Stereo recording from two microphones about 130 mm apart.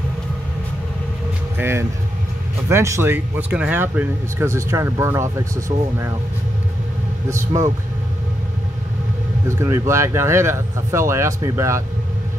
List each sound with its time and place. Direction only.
1.6 s speech: 20° right (ahead or behind)
7.2 s speech: 25° right (ahead or behind)
9.6 s speech: 20° right (ahead or behind)